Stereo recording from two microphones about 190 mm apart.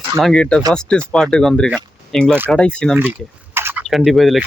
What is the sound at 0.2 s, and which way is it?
Speech, 5° left (ahead or behind).